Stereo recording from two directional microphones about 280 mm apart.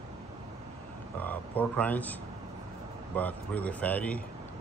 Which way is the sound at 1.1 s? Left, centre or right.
Centre.